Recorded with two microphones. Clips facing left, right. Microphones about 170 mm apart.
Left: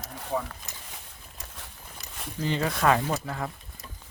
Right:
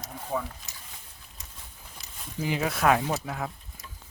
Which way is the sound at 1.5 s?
75° left (ahead or behind).